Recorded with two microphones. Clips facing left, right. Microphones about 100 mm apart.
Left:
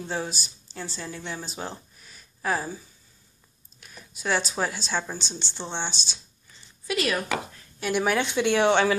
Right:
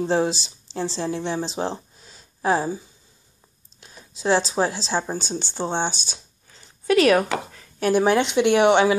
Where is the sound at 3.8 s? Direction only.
25° right (ahead or behind); by 6.2 s 50° right (ahead or behind).